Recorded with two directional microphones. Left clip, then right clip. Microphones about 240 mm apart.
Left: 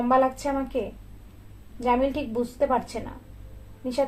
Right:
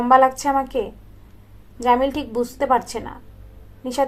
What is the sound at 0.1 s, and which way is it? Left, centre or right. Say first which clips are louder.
Speech: right 8 dB; right.